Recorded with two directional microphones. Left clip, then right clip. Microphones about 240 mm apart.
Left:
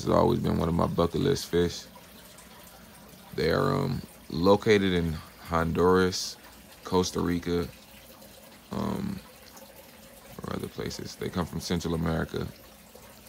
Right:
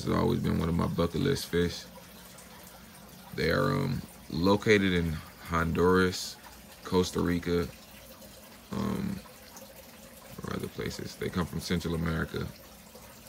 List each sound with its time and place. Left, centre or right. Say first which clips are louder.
0.0 s speech: left 6 dB; centre
3.3 s speech: left 2 dB; centre
10.4 s speech: left 1 dB; centre